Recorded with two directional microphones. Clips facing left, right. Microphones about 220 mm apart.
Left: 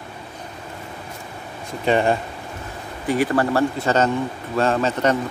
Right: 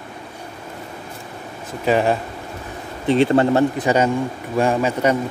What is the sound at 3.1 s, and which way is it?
Speech, 25° right (ahead or behind).